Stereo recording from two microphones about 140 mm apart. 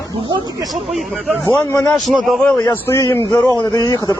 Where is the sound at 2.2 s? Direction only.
Centre (ahead or behind).